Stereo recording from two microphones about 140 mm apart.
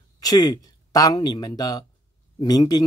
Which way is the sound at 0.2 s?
30° left (ahead or behind).